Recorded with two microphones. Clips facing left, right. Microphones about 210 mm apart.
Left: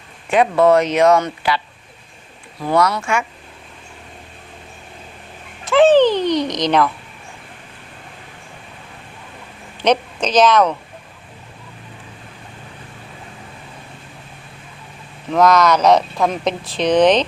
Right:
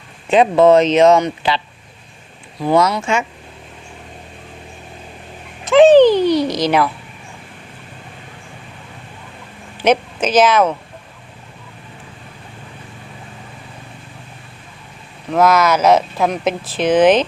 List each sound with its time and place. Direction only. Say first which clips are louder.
0.3 s speech: right 3 dB; 20° right (ahead or behind)
5.6 s a sound: right 4 dB; 15° right (ahead or behind)
9.8 s a woman's voice: right 2 dB; 5° right (ahead or behind)
15.3 s speech: even; 5° right (ahead or behind)